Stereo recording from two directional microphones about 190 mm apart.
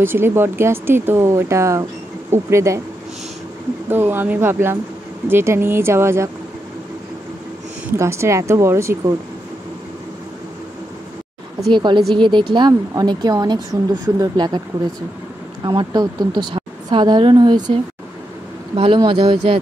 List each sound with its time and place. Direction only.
0.0 s speech: 10° right (ahead or behind)
3.9 s speech: 10° right (ahead or behind)
8.0 s speech: 15° right (ahead or behind)
11.7 s a woman's voice: 25° right (ahead or behind)
15.6 s a woman's voice: 25° right (ahead or behind)
18.8 s a woman's voice: 25° right (ahead or behind)